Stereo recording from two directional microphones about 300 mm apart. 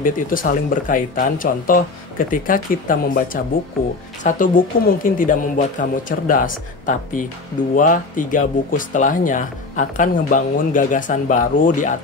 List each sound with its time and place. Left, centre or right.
0.0 s speech: left